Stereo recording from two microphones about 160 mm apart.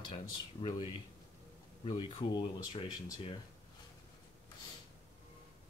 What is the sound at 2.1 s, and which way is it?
Speech, 30° left (ahead or behind).